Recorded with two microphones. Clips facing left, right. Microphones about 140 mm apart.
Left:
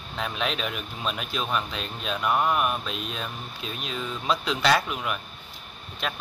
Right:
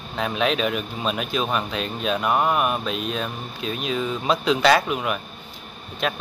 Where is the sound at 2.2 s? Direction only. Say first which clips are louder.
Right 2 dB; 45° right (ahead or behind).